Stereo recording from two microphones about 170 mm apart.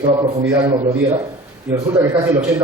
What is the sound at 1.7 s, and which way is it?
Speech, 20° right (ahead or behind).